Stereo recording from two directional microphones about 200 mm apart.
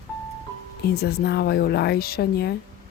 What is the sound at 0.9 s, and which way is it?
Speech, 55° left (ahead or behind).